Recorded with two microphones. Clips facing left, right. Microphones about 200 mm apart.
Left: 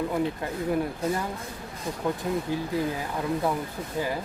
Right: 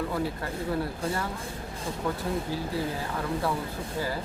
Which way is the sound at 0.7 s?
15° left (ahead or behind).